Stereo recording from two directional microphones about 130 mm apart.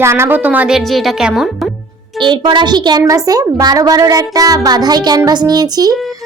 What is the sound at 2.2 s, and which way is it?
A woman's voice, 35° right (ahead or behind).